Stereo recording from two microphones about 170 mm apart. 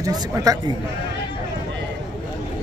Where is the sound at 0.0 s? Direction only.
20° right (ahead or behind).